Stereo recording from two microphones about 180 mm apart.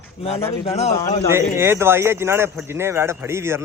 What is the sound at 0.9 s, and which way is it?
Speech, 15° left (ahead or behind).